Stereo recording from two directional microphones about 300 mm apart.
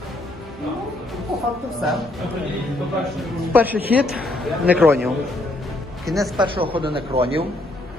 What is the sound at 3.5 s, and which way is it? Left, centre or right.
Speech, centre.